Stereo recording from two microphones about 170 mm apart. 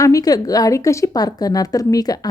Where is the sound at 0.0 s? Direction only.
20° left (ahead or behind).